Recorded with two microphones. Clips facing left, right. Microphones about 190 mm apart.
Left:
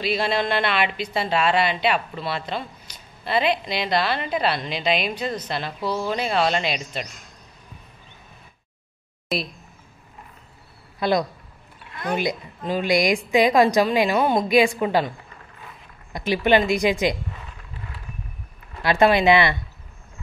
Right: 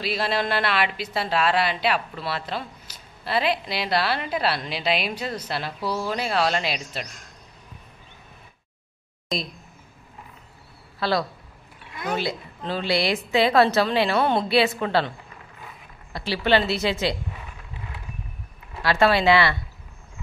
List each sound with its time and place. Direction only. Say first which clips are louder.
0.0 s a woman's voice: left 2 dB; centre (ahead or behind)
9.3 s a woman's voice: left 2 dB; 5° left (ahead or behind)
11.0 s a woman's voice: left 3 dB; 20° left (ahead or behind)
18.8 s a woman's voice: left 2 dB; 20° left (ahead or behind)